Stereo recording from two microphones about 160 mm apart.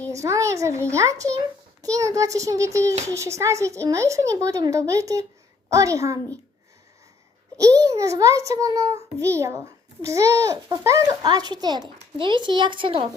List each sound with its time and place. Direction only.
0.1 s a child's voice: 20° right (ahead or behind)
7.6 s a child's voice: 20° right (ahead or behind)